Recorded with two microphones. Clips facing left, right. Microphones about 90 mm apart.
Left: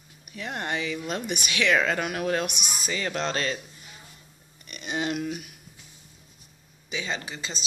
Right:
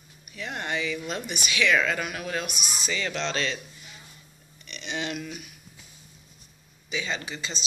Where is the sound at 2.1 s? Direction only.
45° left (ahead or behind).